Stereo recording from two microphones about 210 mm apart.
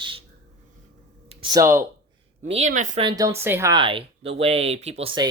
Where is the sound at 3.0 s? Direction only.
20° right (ahead or behind).